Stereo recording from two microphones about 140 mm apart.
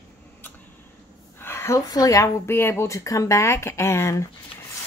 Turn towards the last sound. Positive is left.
turn(degrees=20)  # may be behind; listen again after turning